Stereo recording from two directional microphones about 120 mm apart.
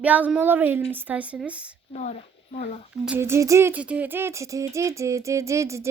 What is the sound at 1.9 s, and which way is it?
Speech, 70° left (ahead or behind).